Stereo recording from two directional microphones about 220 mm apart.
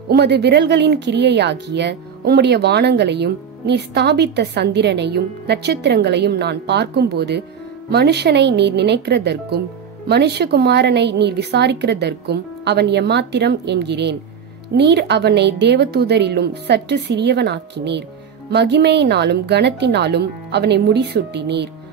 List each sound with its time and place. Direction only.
0.1 s speech: 50° right (ahead or behind)